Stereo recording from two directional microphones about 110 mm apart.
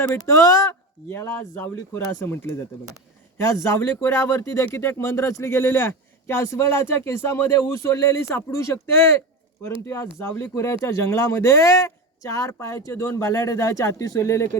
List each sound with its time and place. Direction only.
0.1 s speech: 30° left (ahead or behind)
3.5 s speech: 25° left (ahead or behind)
9.8 s speech: 25° left (ahead or behind)